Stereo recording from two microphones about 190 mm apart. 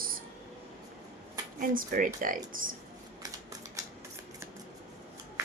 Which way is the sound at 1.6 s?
45° right (ahead or behind).